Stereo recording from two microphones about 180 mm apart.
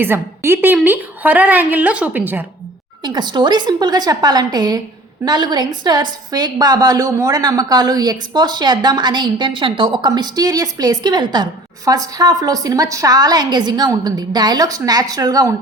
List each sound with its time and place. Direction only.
0.0 s a woman's voice: 10° right (ahead or behind)
3.0 s a woman's voice: 25° right (ahead or behind)